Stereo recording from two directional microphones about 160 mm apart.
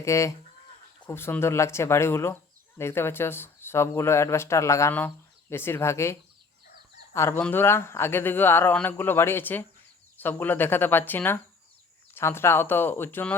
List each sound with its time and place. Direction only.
0.0 s speech: 20° left (ahead or behind)